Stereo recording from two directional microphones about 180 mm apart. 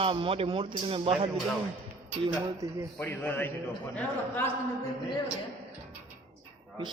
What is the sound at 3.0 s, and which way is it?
A man's voice, 10° left (ahead or behind).